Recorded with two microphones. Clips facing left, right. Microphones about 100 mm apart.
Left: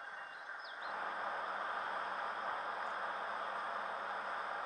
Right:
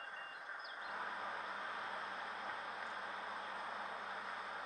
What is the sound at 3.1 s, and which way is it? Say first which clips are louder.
Vehicle: left 5 dB; 30° left (ahead or behind).